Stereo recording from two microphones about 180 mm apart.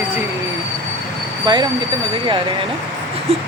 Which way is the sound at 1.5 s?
25° right (ahead or behind).